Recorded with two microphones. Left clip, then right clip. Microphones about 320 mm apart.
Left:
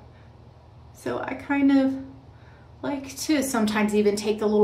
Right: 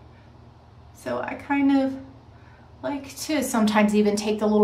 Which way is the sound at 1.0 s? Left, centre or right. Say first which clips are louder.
Right 1 dB; centre.